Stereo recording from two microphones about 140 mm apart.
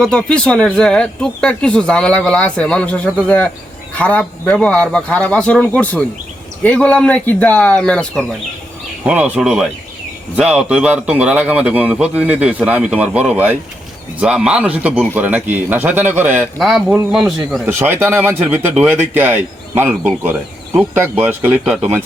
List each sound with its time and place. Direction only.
0.0 s speech: 5° left (ahead or behind)
9.0 s a man's voice: 10° right (ahead or behind)
16.6 s speech: centre (ahead or behind)
17.7 s a man's voice: 20° right (ahead or behind)